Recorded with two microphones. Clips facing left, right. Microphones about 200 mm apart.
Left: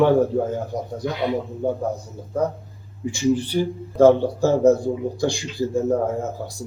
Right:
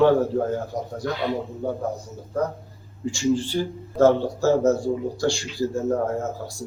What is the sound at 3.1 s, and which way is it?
Speech, 20° left (ahead or behind).